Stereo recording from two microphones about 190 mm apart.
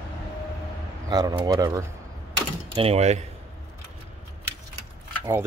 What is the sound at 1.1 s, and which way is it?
Speech, 20° right (ahead or behind).